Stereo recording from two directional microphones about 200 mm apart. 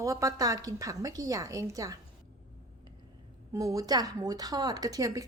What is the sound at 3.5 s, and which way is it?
A woman's voice, 15° right (ahead or behind).